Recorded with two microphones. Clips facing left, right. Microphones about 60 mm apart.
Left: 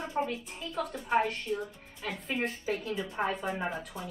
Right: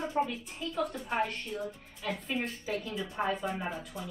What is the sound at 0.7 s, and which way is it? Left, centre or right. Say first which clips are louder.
A woman's voice: left 3 dB; centre.